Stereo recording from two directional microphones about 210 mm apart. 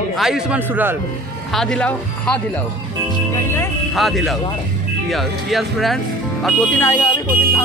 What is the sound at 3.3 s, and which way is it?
Speech, 10° left (ahead or behind).